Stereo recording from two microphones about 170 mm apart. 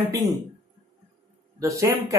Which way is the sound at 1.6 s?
15° right (ahead or behind).